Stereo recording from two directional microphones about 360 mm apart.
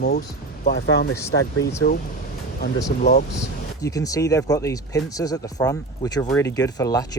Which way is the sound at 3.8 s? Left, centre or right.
Centre.